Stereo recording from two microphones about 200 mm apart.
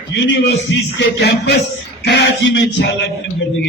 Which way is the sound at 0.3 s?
65° left (ahead or behind).